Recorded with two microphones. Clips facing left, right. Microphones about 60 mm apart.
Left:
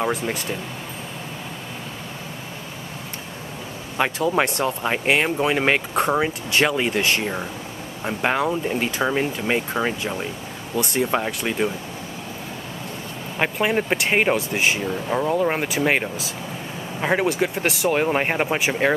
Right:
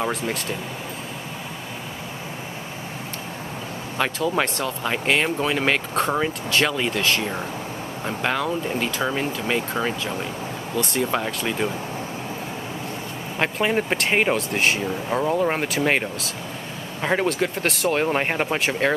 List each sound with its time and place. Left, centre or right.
0.0 s speech: centre
4.0 s speech: centre
8.0 s speech: centre
10.8 s speech: centre
13.4 s speech: centre